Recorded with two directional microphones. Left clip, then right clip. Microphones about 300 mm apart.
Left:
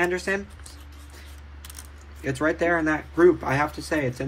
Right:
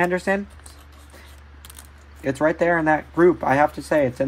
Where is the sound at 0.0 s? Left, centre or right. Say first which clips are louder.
Right 4 dB; right.